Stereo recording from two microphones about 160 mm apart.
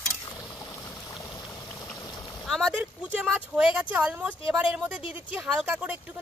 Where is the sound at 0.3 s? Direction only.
20° left (ahead or behind).